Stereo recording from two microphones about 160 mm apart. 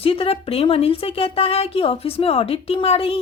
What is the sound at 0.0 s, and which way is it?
A woman's voice, 35° left (ahead or behind).